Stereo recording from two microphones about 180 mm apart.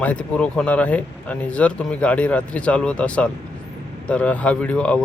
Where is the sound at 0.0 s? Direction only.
5° left (ahead or behind).